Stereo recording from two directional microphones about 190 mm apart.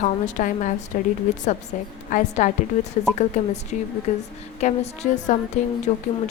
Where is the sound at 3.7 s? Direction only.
40° left (ahead or behind).